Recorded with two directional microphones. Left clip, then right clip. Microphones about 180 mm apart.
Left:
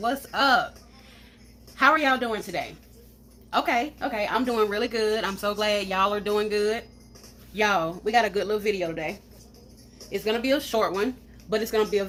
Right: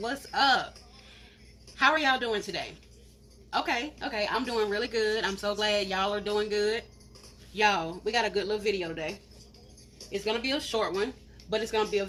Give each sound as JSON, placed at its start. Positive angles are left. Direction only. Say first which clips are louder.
{"t": 0.1, "sound": "a woman's voice", "louder": "left 2 dB", "side_deg": 50}
{"t": 1.7, "sound": "a woman's voice", "louder": "left 4 dB", "side_deg": 50}
{"t": 10.1, "sound": "speech", "louder": "left 5 dB", "side_deg": 55}